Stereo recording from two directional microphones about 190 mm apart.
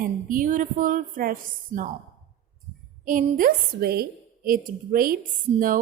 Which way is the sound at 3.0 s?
45° right (ahead or behind).